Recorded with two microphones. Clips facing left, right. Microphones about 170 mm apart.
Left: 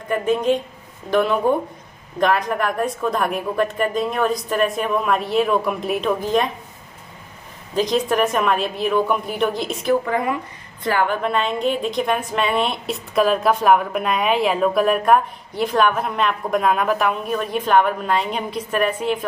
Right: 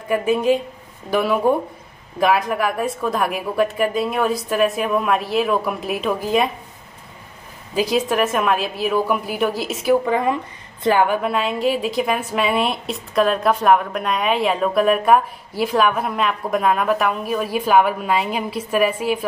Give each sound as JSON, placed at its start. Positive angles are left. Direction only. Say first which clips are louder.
{"t": 0.1, "sound": "a woman's voice", "louder": "right 1 dB", "side_deg": -5}
{"t": 7.7, "sound": "a woman's voice", "louder": "even", "side_deg": -5}
{"t": 10.0, "sound": "a woman's voice", "louder": "right 2 dB", "side_deg": -20}
{"t": 11.1, "sound": "a woman's voice", "louder": "right 1 dB", "side_deg": -5}